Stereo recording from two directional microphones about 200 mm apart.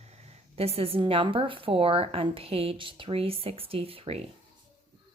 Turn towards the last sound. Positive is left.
turn(degrees=-30)  # may be behind; listen again after turning